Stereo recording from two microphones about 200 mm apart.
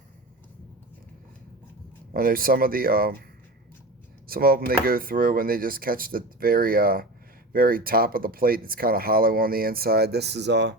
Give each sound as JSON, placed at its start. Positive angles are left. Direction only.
{"t": 2.1, "sound": "speech", "side_deg": -45}
{"t": 4.3, "sound": "speech", "side_deg": -50}